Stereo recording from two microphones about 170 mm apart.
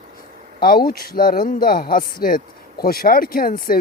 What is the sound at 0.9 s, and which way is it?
Speech, 60° left (ahead or behind).